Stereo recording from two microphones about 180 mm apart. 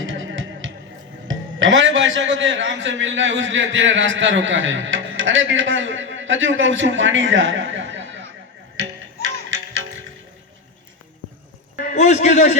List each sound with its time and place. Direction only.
0.0 s music: 90° right
1.3 s a man's voice: 90° right
8.7 s music: 90° right
11.8 s a sound: 45° left (ahead or behind)